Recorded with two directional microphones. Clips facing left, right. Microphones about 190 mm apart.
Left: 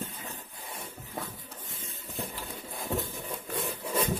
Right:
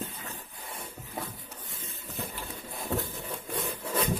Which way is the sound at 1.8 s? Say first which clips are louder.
Even; 25° left (ahead or behind).